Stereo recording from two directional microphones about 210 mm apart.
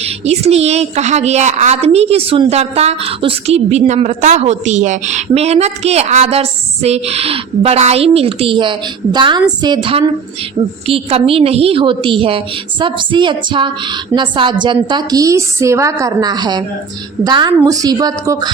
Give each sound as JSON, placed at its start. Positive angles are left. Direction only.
{"t": 0.0, "sound": "a woman's voice", "side_deg": -30}